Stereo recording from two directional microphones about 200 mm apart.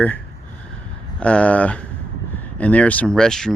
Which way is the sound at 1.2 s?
5° left (ahead or behind).